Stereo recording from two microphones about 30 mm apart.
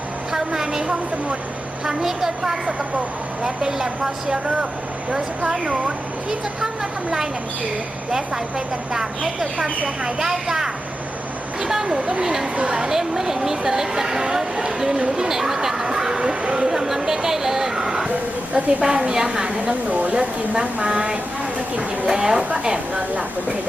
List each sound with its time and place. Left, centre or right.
0.3 s a sound: centre
1.8 s speech: right
3.4 s speech: right
5.4 s a woman's voice: right
10.2 s a woman's voice: centre
11.9 s a woman's voice: right
12.2 s a woman's voice: centre
16.6 s speech: centre
18.1 s speech: right
18.8 s a woman's voice: right
19.5 s a woman's voice: right
22.1 s a woman's voice: right